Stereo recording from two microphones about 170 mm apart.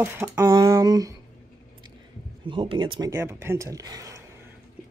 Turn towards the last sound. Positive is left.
turn(degrees=-20)  # may be behind; listen again after turning